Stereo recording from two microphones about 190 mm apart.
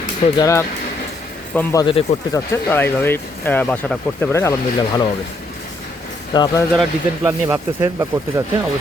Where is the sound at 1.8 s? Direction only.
30° left (ahead or behind).